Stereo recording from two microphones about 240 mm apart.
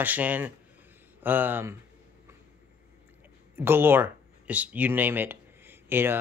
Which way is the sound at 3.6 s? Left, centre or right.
Centre.